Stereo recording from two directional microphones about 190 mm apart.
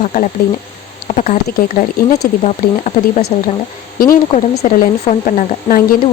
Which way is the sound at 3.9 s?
50° left (ahead or behind).